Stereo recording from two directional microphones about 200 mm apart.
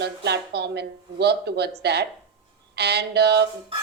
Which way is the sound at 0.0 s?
55° right (ahead or behind).